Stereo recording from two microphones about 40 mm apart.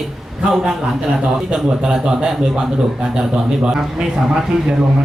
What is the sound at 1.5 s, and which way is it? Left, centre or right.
A man's voice, centre.